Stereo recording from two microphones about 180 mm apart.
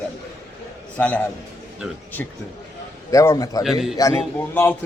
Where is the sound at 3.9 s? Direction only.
15° left (ahead or behind).